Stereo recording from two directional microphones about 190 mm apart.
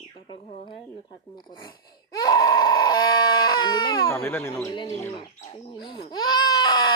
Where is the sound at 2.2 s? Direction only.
20° left (ahead or behind).